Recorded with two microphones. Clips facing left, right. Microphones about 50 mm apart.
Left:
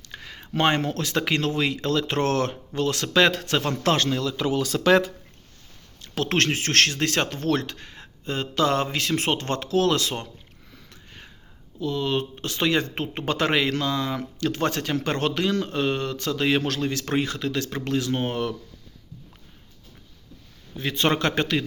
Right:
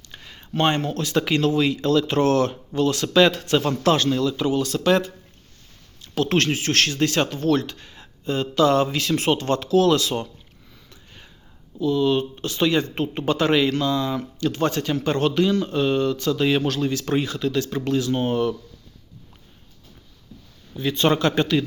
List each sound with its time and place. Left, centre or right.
0.1 s a sound: left
0.9 s speech: left
1.1 s speech: left
6.0 s speech: left
11.8 s speech: left
21.0 s speech: left